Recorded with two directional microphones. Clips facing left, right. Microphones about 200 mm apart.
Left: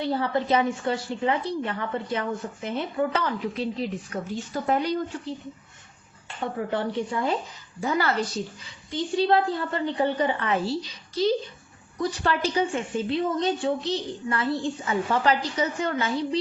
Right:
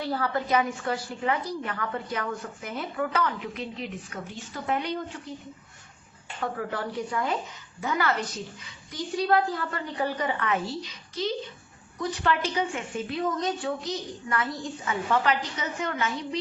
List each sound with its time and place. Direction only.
0.0 s a woman's voice: 25° left (ahead or behind)
6.4 s a woman's voice: 25° left (ahead or behind)